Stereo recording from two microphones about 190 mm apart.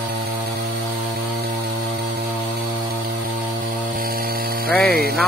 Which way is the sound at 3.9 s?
50° right (ahead or behind).